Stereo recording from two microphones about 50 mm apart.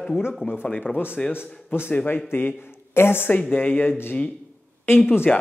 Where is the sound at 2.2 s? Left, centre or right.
Left.